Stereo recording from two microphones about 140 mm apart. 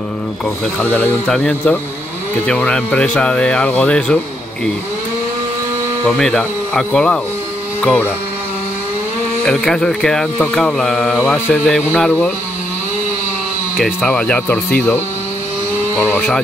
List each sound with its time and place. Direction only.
0.7 s speech: 10° left (ahead or behind)
6.0 s speech: 5° left (ahead or behind)
9.5 s speech: 5° left (ahead or behind)
11.1 s speech: 15° left (ahead or behind)
13.7 s speech: 5° right (ahead or behind)
14.1 s speech: 10° left (ahead or behind)
16.0 s speech: 15° left (ahead or behind)